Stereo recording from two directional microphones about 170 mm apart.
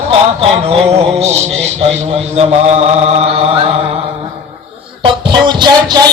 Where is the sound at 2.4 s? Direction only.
40° right (ahead or behind).